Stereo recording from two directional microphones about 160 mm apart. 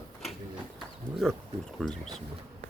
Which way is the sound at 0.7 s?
Centre (ahead or behind).